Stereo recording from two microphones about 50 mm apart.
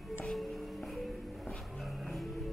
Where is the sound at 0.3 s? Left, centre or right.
Centre.